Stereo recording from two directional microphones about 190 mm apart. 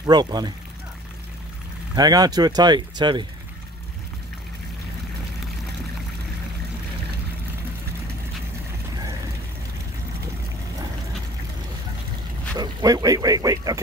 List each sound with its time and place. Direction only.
0.0 s speech: 20° right (ahead or behind)
2.0 s speech: 20° right (ahead or behind)
12.5 s speech: 20° right (ahead or behind)